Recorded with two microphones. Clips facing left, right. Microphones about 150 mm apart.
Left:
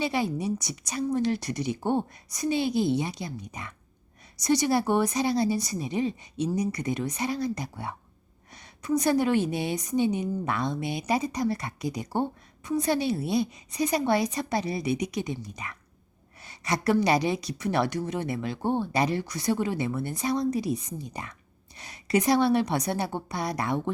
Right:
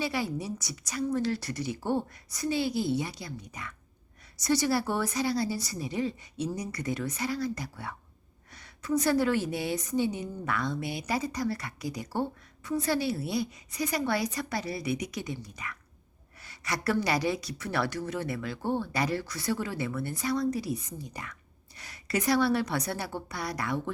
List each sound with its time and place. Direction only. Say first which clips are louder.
0.0 s a woman's voice: left 4 dB; 20° left (ahead or behind)